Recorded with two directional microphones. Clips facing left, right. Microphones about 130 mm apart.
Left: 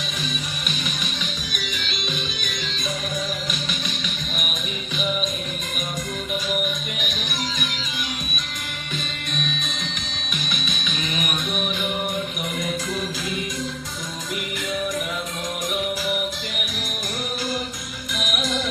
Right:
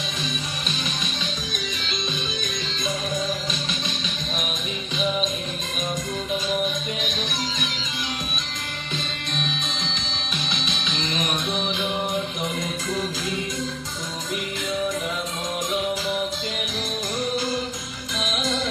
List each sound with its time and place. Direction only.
6.3 s music: 25° right (ahead or behind)
10.5 s music: 25° right (ahead or behind)
18.1 s music: 25° right (ahead or behind)